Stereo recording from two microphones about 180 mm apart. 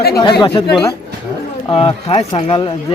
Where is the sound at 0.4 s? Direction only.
30° left (ahead or behind).